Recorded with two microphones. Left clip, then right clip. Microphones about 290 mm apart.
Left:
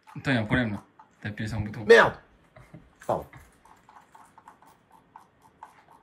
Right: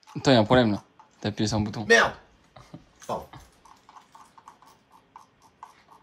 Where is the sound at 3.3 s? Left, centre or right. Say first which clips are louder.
Right 3 dB; centre.